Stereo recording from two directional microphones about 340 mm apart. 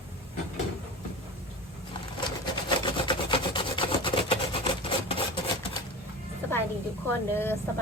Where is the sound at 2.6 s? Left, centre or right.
Centre.